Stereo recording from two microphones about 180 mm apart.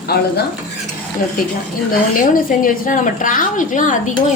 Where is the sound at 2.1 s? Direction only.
50° left (ahead or behind).